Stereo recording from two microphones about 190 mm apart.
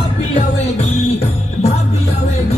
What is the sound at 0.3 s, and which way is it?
Music, 40° left (ahead or behind).